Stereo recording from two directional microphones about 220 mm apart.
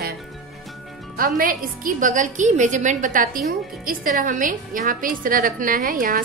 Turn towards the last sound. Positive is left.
turn(degrees=-40)  # may be behind; listen again after turning